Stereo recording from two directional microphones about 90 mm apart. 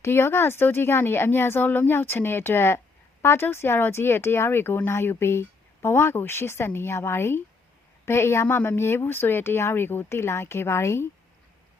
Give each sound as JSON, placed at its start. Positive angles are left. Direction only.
{"t": 0.0, "sound": "speech", "side_deg": 25}